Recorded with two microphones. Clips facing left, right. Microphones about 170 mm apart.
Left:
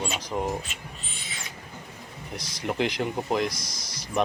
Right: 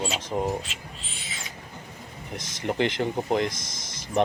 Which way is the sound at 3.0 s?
20° right (ahead or behind).